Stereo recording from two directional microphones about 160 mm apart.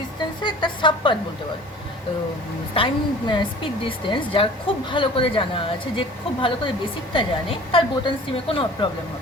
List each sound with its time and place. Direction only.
0.4 s speech: 30° left (ahead or behind)
2.7 s a woman's voice: 30° left (ahead or behind)